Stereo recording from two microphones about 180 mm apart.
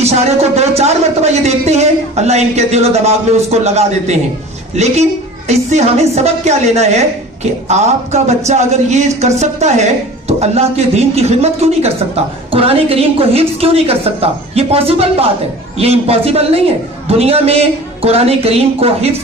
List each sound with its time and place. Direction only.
0.0 s speech: 35° right (ahead or behind)